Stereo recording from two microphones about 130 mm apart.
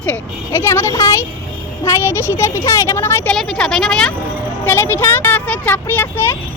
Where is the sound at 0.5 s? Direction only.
20° left (ahead or behind).